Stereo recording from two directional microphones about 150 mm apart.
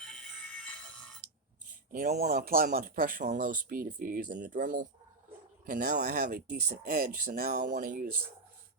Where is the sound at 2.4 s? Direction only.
70° right (ahead or behind).